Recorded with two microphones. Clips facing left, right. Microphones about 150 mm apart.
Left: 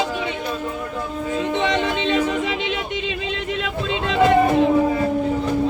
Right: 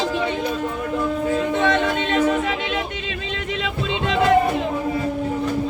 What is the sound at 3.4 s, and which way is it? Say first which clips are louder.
Music: right 1 dB; centre (ahead or behind).